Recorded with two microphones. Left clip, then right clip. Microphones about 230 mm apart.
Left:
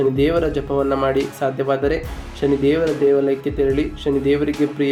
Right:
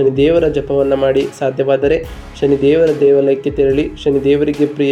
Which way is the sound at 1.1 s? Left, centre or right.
Centre.